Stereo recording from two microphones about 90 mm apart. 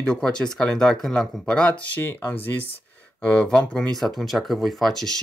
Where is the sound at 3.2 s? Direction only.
10° left (ahead or behind).